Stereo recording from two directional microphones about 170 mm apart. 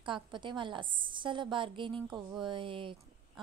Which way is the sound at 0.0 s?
30° right (ahead or behind).